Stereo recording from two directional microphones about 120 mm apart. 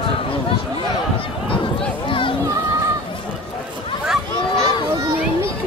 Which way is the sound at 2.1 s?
45° left (ahead or behind).